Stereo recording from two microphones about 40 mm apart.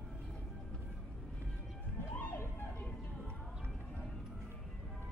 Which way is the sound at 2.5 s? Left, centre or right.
Left.